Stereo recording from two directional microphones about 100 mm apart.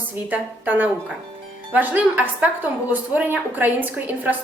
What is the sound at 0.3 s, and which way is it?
A woman's voice, 20° right (ahead or behind).